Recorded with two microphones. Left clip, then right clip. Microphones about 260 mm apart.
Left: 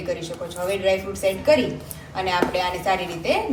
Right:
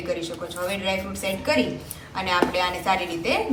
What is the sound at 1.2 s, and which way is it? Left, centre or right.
A woman's voice, centre.